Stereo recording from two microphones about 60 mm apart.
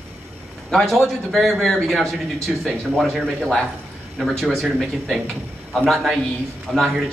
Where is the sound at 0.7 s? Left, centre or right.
Centre.